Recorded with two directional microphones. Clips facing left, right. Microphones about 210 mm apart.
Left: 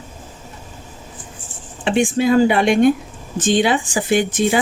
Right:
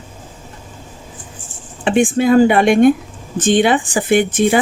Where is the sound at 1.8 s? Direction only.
50° right (ahead or behind).